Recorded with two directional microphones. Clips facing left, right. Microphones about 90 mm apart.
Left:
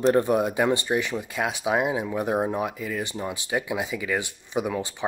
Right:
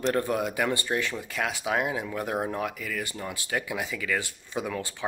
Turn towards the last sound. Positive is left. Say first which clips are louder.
# left 5 dB
turn(degrees=20)  # may be behind; listen again after turning